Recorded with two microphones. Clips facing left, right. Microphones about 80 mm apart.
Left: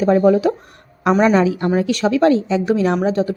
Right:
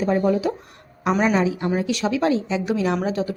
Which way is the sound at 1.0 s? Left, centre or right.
Left.